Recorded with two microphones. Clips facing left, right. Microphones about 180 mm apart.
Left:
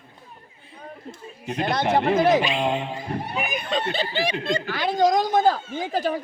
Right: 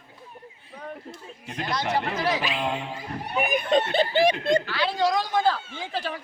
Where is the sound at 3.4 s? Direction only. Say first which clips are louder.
Right 7 dB; 50° right (ahead or behind).